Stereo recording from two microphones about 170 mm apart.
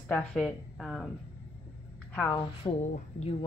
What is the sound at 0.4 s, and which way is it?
Speech, centre (ahead or behind).